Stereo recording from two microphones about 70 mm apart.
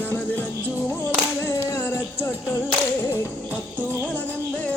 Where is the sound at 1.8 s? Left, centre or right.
Left.